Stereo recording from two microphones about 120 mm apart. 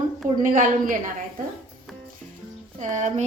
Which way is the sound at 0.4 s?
90° right.